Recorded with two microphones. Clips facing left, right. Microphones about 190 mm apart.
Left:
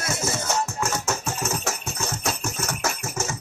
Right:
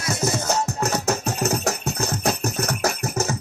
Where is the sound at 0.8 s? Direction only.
35° right (ahead or behind).